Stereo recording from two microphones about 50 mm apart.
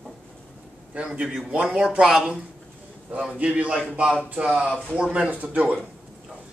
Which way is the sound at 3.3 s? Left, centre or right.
Right.